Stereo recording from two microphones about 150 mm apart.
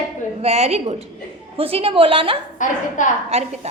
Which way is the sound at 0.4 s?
45° right (ahead or behind).